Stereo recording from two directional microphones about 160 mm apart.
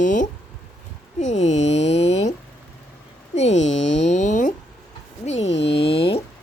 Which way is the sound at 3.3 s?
45° left (ahead or behind).